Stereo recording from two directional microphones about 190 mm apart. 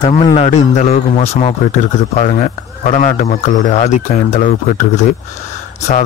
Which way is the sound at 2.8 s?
40° left (ahead or behind).